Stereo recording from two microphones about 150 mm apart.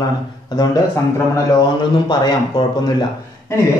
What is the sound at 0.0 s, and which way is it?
A man's voice, 25° left (ahead or behind).